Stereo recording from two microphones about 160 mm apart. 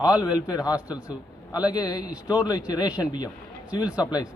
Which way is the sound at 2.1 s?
5° right (ahead or behind).